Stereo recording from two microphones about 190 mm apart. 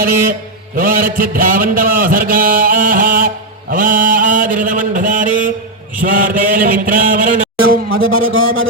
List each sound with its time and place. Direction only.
0.8 s a man's voice: 50° right (ahead or behind)
7.9 s speech: 90° right